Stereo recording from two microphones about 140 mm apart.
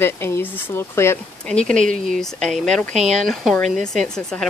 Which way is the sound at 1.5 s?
5° left (ahead or behind).